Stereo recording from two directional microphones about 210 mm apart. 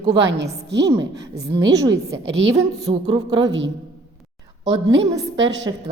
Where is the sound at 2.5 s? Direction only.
20° right (ahead or behind).